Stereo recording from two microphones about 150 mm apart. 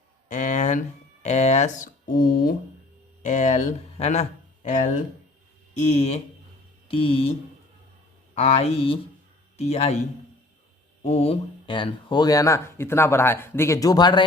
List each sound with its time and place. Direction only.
0.3 s a sound: 60° left (ahead or behind)
1.2 s speech: 50° left (ahead or behind); by 2.6 s 75° left (ahead or behind)
3.2 s speech: 55° left (ahead or behind)
3.9 s speech: 45° left (ahead or behind)
5.8 s speech: 45° left (ahead or behind)
6.8 s speech: 35° left (ahead or behind)
8.4 s speech: 45° left (ahead or behind)
11.0 s speech: 45° left (ahead or behind); by 14.3 s 30° left (ahead or behind)